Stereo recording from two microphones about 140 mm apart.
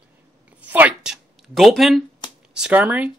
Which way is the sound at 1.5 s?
Centre (ahead or behind).